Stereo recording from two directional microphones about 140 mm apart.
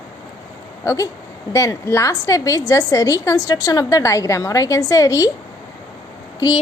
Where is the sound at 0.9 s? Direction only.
20° left (ahead or behind).